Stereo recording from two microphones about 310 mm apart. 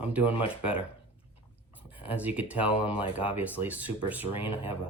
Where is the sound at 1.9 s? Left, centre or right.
Centre.